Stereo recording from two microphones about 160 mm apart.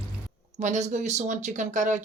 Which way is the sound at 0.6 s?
45° right (ahead or behind).